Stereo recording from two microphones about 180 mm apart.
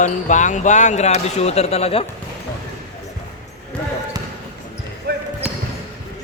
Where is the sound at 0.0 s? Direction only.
45° left (ahead or behind).